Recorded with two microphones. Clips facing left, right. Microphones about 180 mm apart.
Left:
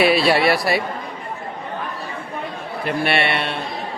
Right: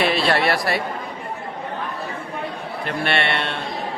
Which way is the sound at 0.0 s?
10° left (ahead or behind).